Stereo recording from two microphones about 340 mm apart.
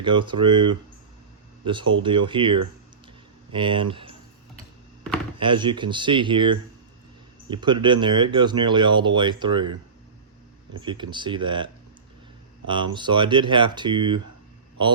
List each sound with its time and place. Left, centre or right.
0.0 s speech: centre
5.4 s speech: centre
10.8 s speech: centre